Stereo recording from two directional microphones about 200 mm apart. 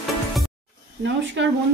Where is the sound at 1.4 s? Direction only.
65° right (ahead or behind).